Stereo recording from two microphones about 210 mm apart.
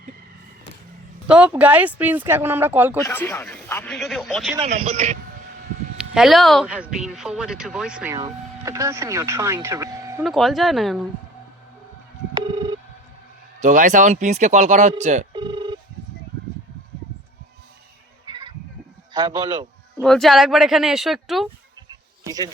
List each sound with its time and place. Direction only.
1.3 s speech: 5° right (ahead or behind)
3.1 s speech: 10° left (ahead or behind)
4.6 s speech: 30° right (ahead or behind)
6.0 s speech: centre (ahead or behind)
8.1 s speech: 15° right (ahead or behind)
10.2 s speech: centre (ahead or behind)
13.6 s speech: 35° right (ahead or behind)
15.3 s telephone bell ringing: 20° right (ahead or behind)
18.3 s a sound: 20° right (ahead or behind)
19.1 s speech: 20° right (ahead or behind)
20.0 s speech: 5° left (ahead or behind)
22.2 s speech: 15° right (ahead or behind)